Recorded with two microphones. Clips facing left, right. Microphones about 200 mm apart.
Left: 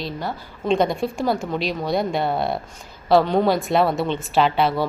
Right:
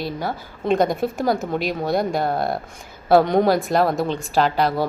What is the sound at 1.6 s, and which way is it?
Speech, 50° right (ahead or behind).